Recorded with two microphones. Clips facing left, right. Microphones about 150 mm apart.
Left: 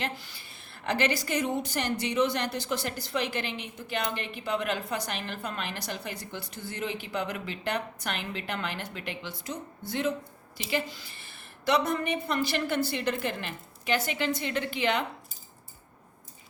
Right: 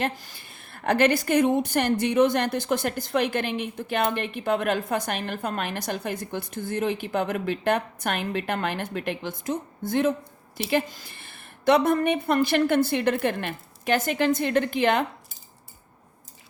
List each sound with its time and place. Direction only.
0.0 s a woman's voice: 45° right (ahead or behind)